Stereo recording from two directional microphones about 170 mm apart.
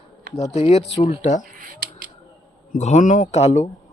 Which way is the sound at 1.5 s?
55° right (ahead or behind).